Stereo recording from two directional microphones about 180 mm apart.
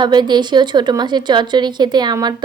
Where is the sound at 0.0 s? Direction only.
25° right (ahead or behind).